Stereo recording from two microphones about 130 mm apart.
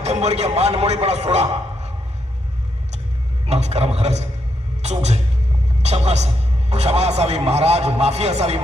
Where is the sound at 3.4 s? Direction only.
55° right (ahead or behind).